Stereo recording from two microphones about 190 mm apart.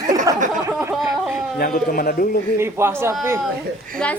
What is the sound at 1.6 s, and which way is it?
Speech, 50° left (ahead or behind).